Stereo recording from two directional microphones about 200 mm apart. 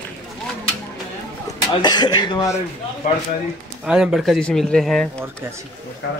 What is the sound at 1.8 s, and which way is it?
Speech, 20° left (ahead or behind).